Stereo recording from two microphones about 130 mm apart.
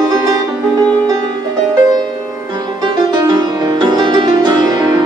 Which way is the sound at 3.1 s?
35° right (ahead or behind).